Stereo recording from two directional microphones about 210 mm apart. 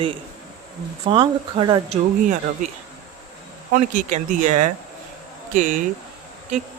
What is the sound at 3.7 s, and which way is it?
Speech, 35° right (ahead or behind).